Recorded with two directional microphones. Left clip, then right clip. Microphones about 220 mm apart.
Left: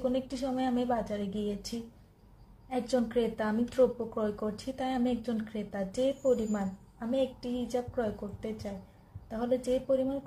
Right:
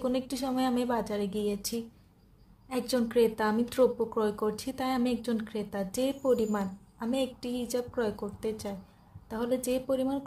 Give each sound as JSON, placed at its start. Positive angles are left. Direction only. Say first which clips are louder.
{"t": 0.0, "sound": "a woman's voice", "louder": "right 1 dB", "side_deg": -50}